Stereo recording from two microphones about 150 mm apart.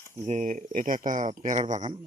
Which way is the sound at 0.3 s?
55° right (ahead or behind).